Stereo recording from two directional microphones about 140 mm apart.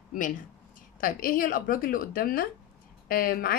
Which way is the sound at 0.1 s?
70° left (ahead or behind).